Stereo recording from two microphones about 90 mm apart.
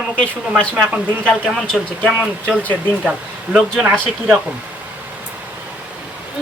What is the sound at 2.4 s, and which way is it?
Speech, 15° left (ahead or behind).